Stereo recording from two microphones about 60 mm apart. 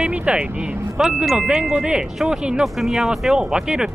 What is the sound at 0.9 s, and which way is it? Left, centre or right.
Speech, centre.